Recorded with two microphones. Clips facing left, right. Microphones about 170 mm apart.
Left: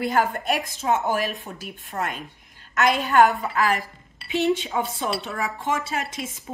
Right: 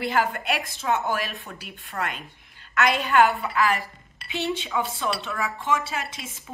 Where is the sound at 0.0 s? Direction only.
40° left (ahead or behind).